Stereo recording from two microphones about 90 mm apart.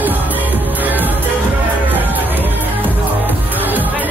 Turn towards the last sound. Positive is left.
turn(degrees=-20)  # may be behind; listen again after turning